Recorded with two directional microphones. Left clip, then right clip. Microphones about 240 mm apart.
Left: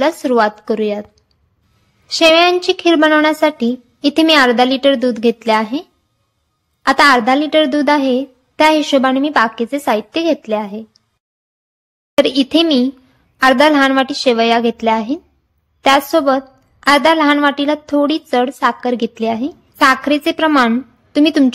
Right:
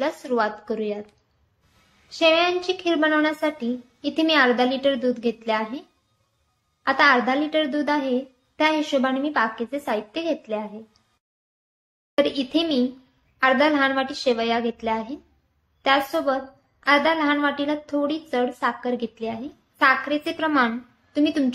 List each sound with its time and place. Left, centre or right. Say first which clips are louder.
0.0 s a woman's voice: left 10 dB; left
2.0 s a woman's voice: left 9 dB; left
12.2 s a woman's voice: left 10 dB; left